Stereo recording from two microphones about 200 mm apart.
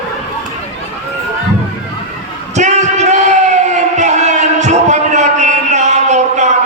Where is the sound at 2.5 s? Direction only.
35° right (ahead or behind).